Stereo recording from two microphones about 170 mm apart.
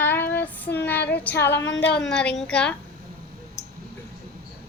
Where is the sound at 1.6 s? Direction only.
90° left.